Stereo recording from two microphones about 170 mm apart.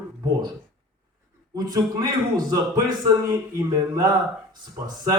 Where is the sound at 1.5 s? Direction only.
20° right (ahead or behind).